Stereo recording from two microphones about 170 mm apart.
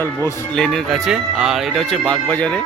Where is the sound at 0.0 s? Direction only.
10° left (ahead or behind).